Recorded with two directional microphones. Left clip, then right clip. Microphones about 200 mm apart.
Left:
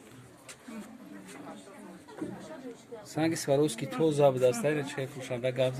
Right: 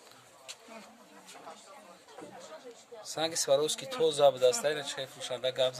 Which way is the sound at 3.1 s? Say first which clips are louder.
Left 1 dB; 20° right (ahead or behind).